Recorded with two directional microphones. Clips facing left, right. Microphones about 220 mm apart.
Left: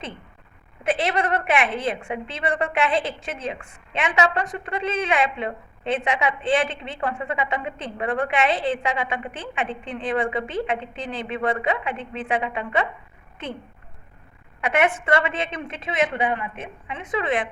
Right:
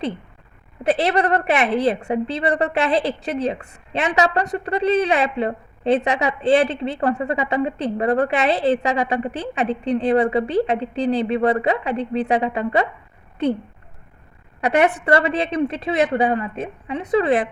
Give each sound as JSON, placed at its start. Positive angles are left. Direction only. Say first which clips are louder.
{"t": 0.9, "sound": "a woman's voice", "louder": "right 5 dB", "side_deg": -40}
{"t": 14.6, "sound": "a woman's voice", "louder": "right 4 dB", "side_deg": -35}